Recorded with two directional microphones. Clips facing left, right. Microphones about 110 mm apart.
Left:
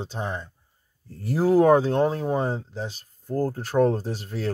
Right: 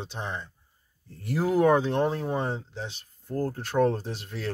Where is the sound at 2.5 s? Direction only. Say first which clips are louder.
Left 4 dB; 40° left (ahead or behind).